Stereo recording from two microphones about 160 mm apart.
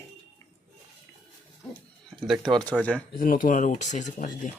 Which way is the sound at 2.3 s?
5° left (ahead or behind).